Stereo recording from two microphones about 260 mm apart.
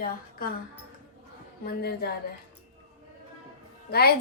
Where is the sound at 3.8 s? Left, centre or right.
Left.